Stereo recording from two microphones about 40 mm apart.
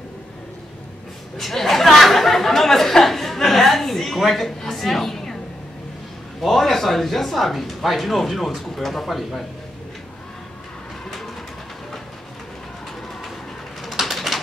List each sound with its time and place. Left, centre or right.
1.4 s a sound: centre
6.4 s speech: centre
13.8 s bird: centre